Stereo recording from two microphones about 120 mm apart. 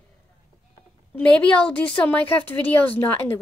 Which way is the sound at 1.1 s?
10° left (ahead or behind).